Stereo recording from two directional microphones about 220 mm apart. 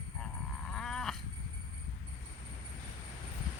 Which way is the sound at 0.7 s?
Centre (ahead or behind).